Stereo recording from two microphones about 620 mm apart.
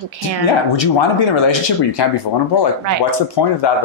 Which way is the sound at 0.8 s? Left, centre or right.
Left.